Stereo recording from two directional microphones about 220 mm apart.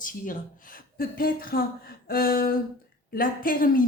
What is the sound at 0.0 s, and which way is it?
Speech, 40° left (ahead or behind).